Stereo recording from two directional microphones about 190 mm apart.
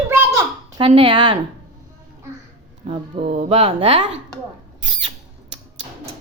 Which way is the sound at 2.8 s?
30° right (ahead or behind).